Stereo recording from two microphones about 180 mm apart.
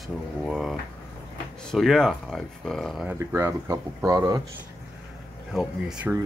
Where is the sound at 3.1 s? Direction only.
15° right (ahead or behind).